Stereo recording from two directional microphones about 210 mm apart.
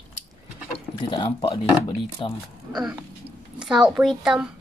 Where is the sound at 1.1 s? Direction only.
25° left (ahead or behind).